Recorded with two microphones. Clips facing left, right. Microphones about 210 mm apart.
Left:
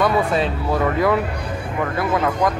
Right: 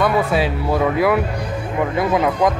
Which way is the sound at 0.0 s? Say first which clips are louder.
Right 1 dB; 5° right (ahead or behind).